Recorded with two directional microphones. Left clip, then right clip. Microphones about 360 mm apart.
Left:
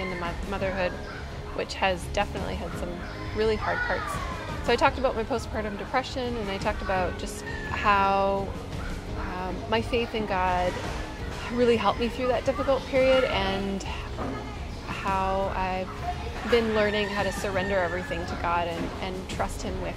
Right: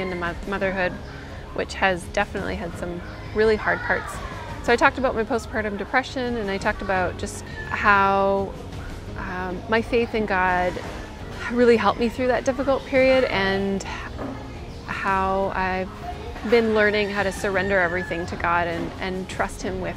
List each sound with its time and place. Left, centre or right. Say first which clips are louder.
0.2 s speech: right 5 dB; right
14.9 s music: right 5 dB; right
16.5 s speech: right 5 dB; right